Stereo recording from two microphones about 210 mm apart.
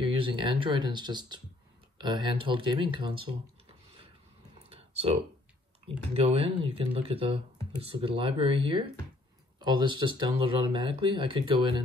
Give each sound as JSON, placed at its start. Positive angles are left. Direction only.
{"t": 0.0, "sound": "speech", "side_deg": -25}
{"t": 4.6, "sound": "computer keyboard", "side_deg": -30}
{"t": 6.1, "sound": "speech", "side_deg": -25}